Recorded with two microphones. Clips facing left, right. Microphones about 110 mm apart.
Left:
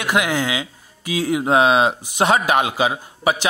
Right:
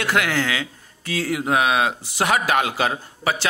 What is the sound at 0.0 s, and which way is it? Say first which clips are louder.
Speech: left 2 dB; 15° left (ahead or behind).